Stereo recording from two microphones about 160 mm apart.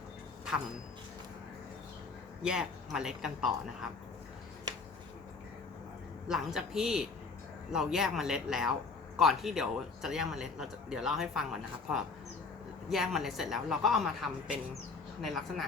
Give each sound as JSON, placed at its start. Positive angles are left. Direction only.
{"t": 2.4, "sound": "speech", "side_deg": -5}
{"t": 6.2, "sound": "speech", "side_deg": 0}
{"t": 12.9, "sound": "speech", "side_deg": 0}